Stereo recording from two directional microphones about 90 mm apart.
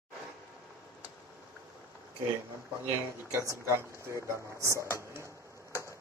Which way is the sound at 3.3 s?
30° right (ahead or behind).